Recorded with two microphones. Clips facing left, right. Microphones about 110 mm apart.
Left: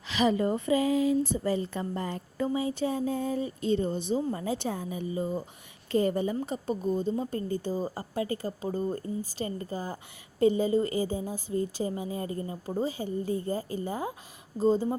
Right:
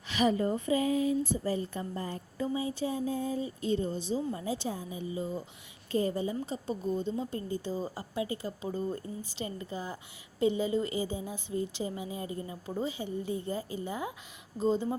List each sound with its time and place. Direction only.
0.1 s speech: 90° left; by 5.4 s 55° left (ahead or behind)
5.9 s a woman's voice: 65° left (ahead or behind); by 14.8 s 35° left (ahead or behind)